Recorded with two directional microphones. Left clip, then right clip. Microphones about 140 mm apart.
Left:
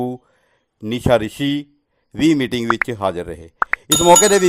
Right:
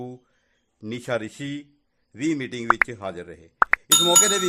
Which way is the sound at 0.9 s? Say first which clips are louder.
Left 11 dB; 40° left (ahead or behind).